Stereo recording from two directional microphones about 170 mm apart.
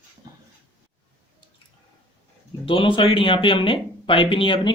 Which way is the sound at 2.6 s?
30° left (ahead or behind).